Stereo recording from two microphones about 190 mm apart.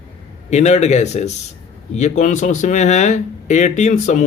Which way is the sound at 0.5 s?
35° left (ahead or behind).